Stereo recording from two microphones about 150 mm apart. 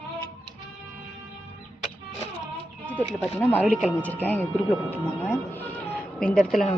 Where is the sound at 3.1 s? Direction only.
5° left (ahead or behind).